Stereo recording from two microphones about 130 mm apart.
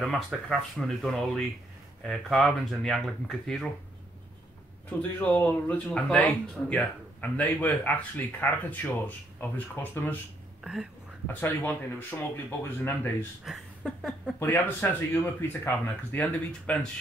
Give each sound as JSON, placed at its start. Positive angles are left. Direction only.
{"t": 0.1, "sound": "speech", "side_deg": 0}
{"t": 4.8, "sound": "speech", "side_deg": 10}
{"t": 10.6, "sound": "speech", "side_deg": -5}
{"t": 11.4, "sound": "speech", "side_deg": 15}
{"t": 13.5, "sound": "a sound", "side_deg": 0}
{"t": 14.4, "sound": "speech", "side_deg": 15}